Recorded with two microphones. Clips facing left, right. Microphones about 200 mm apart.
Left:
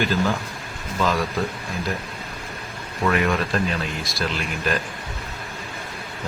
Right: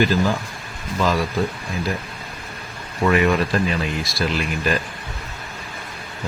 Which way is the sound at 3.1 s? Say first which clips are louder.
Right 4 dB; 5° right (ahead or behind).